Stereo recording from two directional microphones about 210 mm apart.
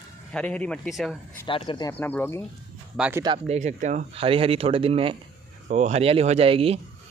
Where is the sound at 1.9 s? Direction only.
10° left (ahead or behind).